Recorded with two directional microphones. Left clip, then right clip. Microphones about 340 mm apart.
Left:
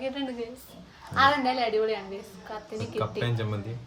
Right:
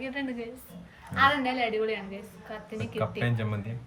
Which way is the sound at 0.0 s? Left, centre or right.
Centre.